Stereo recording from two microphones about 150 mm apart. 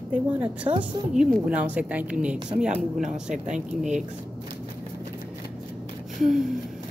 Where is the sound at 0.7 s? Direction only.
35° right (ahead or behind).